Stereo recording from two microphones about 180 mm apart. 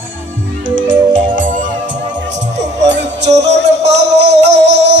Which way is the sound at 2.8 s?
75° right (ahead or behind).